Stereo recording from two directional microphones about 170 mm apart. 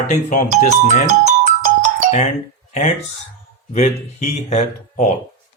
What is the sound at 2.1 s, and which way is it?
Speech, 45° left (ahead or behind).